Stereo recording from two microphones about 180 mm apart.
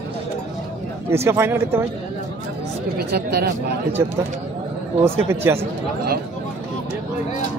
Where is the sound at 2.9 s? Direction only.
60° right (ahead or behind).